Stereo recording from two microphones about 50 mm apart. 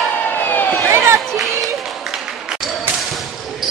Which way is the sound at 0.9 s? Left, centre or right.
Right.